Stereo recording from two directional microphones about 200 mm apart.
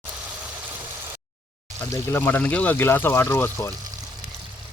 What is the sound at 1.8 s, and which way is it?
Speech, 15° left (ahead or behind).